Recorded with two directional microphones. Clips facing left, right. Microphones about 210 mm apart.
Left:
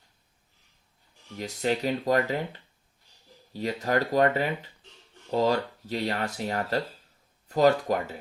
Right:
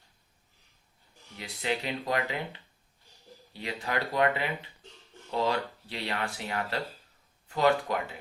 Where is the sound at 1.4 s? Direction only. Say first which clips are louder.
Left 5 dB; 40° left (ahead or behind).